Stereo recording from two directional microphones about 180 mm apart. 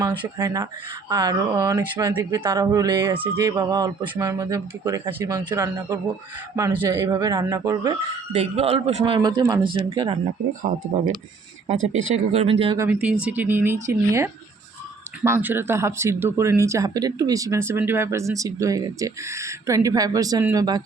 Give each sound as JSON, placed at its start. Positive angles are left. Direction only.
{"t": 0.0, "sound": "speech", "side_deg": -25}
{"t": 8.4, "sound": "a man's voice", "side_deg": -35}
{"t": 12.1, "sound": "a man's voice", "side_deg": -35}
{"t": 12.9, "sound": "speech", "side_deg": -5}